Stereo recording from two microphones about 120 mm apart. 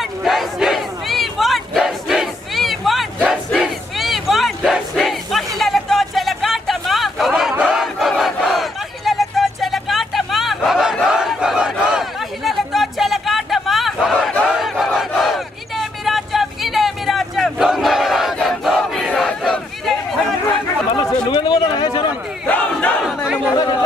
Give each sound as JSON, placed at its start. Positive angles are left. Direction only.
{"t": 0.2, "sound": "battle cry", "side_deg": 0}
{"t": 11.1, "sound": "a sound", "side_deg": -5}
{"t": 14.5, "sound": "crowd", "side_deg": -5}
{"t": 20.9, "sound": "a sound", "side_deg": 40}
{"t": 22.5, "sound": "crowd", "side_deg": 15}
{"t": 23.0, "sound": "chatter", "side_deg": -10}
{"t": 23.5, "sound": "chatter", "side_deg": 35}